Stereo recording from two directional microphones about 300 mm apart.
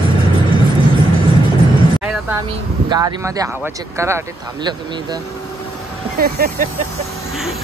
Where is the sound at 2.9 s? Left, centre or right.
Centre.